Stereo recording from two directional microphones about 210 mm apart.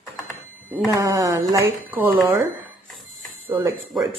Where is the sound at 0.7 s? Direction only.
15° right (ahead or behind).